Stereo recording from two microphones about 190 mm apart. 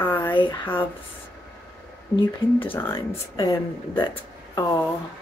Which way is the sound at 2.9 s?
25° left (ahead or behind).